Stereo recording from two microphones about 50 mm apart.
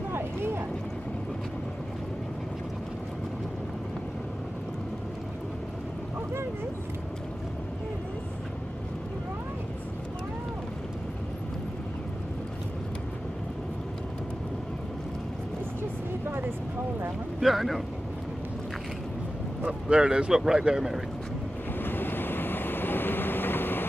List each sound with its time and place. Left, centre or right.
17.4 s speech: centre
19.6 s speech: centre
21.7 s vehicle: left